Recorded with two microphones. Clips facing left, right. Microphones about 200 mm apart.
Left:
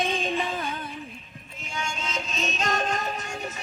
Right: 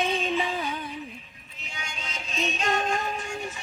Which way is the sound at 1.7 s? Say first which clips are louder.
Left 7 dB; 45° left (ahead or behind).